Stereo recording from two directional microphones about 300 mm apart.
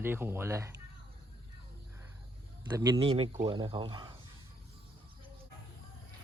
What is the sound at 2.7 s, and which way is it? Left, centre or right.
Speech, centre.